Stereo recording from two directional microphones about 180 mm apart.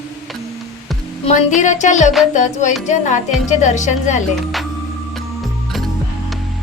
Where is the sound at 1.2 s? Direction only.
40° left (ahead or behind).